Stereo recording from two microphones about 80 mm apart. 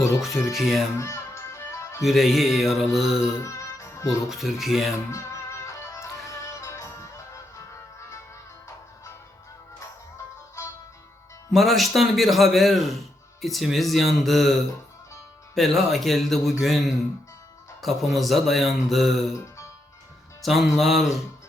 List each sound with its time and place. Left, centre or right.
0.2 s speech: centre
0.9 s music: left
2.0 s speech: centre
3.4 s music: left
4.3 s speech: centre
5.1 s music: left
11.5 s speech: centre
15.5 s speech: centre
20.4 s speech: centre